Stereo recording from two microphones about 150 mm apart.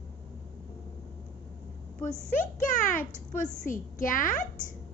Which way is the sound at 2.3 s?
60° left (ahead or behind).